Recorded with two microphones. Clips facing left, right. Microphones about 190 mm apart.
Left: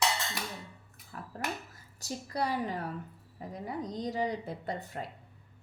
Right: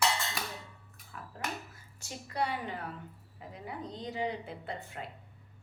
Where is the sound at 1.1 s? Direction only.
40° left (ahead or behind).